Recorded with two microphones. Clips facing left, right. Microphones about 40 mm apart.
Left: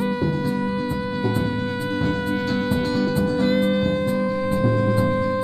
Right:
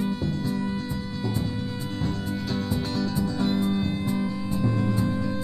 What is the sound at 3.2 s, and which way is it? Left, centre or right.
Music, centre.